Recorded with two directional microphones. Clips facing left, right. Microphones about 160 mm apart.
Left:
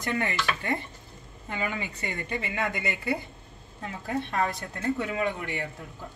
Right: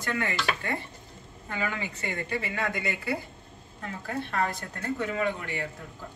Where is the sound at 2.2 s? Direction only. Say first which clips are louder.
Left 2 dB; 20° left (ahead or behind).